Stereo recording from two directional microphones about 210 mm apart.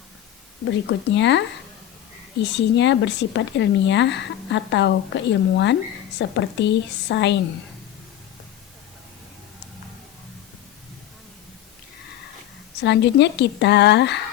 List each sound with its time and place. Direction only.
0.9 s speech: 55° left (ahead or behind)
12.8 s speech: 55° left (ahead or behind)